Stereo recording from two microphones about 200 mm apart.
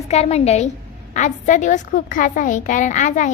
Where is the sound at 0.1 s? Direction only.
30° left (ahead or behind).